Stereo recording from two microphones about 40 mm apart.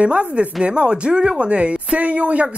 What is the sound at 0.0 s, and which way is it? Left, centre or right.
Speech, right.